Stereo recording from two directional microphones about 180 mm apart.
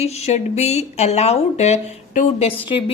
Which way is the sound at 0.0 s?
35° left (ahead or behind).